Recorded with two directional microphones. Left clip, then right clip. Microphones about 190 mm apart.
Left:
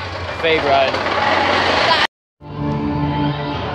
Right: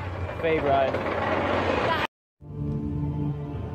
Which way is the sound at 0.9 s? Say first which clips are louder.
Left 10 dB; 40° left (ahead or behind).